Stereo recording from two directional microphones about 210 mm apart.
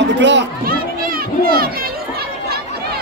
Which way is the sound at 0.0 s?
55° right (ahead or behind).